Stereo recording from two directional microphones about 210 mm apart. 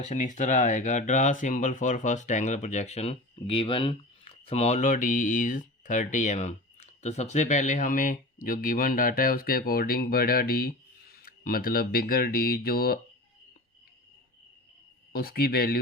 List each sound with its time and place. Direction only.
0.0 s speech: 35° left (ahead or behind)
15.1 s speech: 45° left (ahead or behind)